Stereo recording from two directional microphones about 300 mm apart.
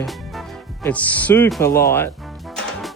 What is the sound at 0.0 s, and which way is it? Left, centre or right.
Speech, centre.